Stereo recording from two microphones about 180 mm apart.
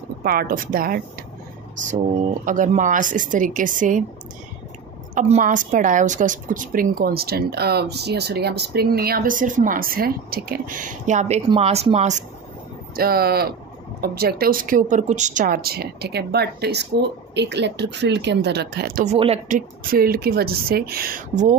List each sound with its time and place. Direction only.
0.2 s speech: 55° right (ahead or behind)
2.4 s a woman's voice: 45° right (ahead or behind)
5.1 s a woman's voice: 45° right (ahead or behind)
12.9 s speech: 60° right (ahead or behind)
19.0 s speech: 35° right (ahead or behind)
19.4 s speech: 50° right (ahead or behind)